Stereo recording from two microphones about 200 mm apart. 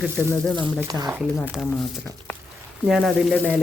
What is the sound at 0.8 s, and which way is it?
Speech, 20° right (ahead or behind).